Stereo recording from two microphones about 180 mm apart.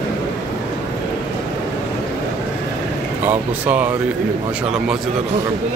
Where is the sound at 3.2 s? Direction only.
10° right (ahead or behind).